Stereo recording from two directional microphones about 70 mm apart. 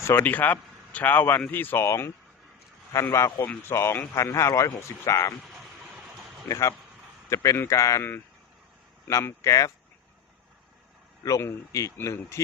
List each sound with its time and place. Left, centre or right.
0.0 s speech: left
0.3 s a man's voice: left
1.8 s speech: left
2.9 s speech: left
3.7 s speech: left
6.5 s speech: left
9.2 s speech: left
11.2 s speech: left